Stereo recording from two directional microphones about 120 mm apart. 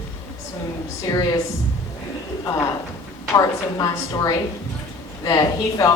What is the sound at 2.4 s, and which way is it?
A woman's voice, 30° left (ahead or behind).